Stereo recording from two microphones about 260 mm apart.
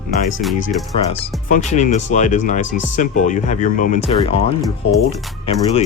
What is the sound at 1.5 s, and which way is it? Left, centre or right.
Speech, left.